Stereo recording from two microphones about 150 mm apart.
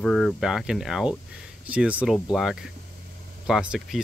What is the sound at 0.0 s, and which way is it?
Speech, 5° left (ahead or behind).